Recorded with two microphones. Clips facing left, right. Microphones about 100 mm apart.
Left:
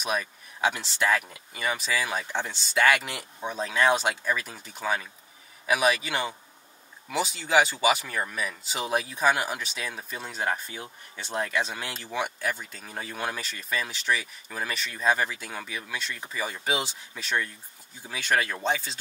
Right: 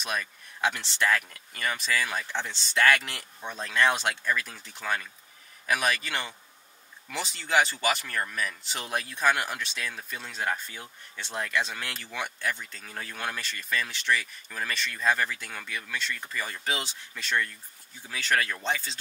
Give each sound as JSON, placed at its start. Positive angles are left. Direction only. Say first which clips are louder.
{"t": 0.0, "sound": "speech", "louder": "left 3 dB", "side_deg": 5}
{"t": 18.6, "sound": "speech", "louder": "left 3 dB", "side_deg": 5}